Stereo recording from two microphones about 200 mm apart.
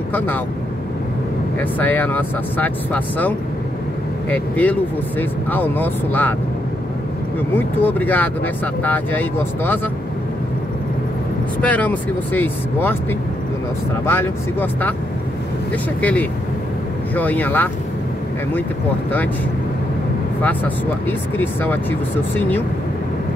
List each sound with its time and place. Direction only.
1.6 s speech: 10° left (ahead or behind)
7.5 s speech: 10° left (ahead or behind)
11.6 s speech: 5° left (ahead or behind)
14.0 s speech: 10° left (ahead or behind)
16.0 s speech: 10° left (ahead or behind)
21.4 s speech: 10° left (ahead or behind)